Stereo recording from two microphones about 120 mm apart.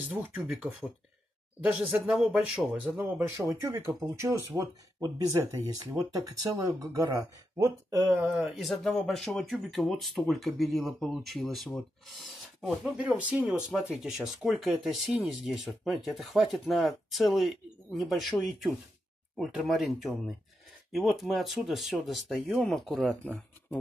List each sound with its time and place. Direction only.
0.0 s speech: 15° right (ahead or behind)
3.2 s speech: 25° right (ahead or behind)
8.2 s speech: 5° right (ahead or behind)
12.9 s speech: 10° right (ahead or behind)
23.1 s speech: 10° left (ahead or behind)